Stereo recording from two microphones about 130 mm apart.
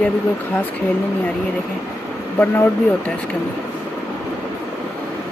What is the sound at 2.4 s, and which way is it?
Speech, 15° left (ahead or behind).